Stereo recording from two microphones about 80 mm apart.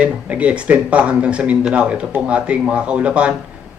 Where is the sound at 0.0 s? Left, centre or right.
Centre.